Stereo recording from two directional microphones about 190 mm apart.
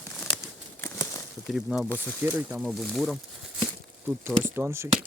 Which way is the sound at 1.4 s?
5° right (ahead or behind).